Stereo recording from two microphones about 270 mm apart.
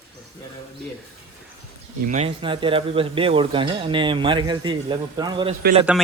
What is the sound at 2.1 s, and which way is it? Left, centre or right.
A man's voice, right.